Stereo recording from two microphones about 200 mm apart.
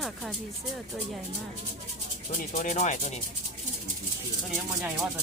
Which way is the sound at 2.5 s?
35° left (ahead or behind).